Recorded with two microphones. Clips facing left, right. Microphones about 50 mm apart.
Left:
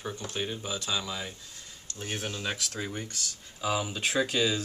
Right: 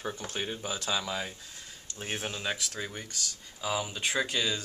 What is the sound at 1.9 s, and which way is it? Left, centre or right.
Speech, right.